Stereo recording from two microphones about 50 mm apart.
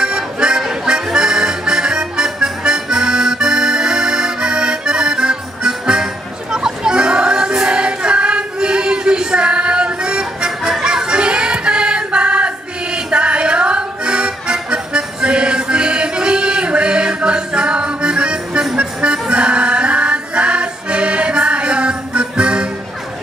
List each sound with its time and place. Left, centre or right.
0.0 s music: centre
1.1 s accordion: centre
6.5 s music: centre